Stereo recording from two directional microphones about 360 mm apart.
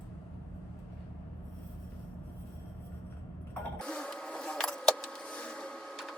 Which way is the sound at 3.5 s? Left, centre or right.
Centre.